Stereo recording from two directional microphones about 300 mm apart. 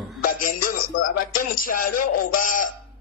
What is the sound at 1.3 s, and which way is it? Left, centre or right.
A man's voice, left.